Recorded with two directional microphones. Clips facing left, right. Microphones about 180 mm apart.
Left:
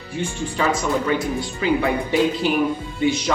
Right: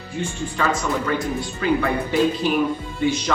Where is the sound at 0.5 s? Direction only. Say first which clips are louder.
Left 2 dB; 15° left (ahead or behind).